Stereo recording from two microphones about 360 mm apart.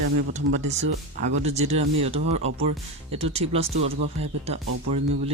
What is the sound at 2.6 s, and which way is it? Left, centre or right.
Speech, centre.